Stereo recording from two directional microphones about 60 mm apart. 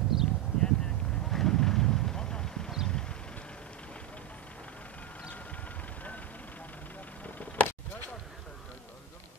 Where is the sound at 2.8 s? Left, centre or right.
Centre.